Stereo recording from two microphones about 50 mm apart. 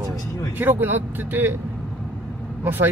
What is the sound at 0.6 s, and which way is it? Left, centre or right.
Speech, right.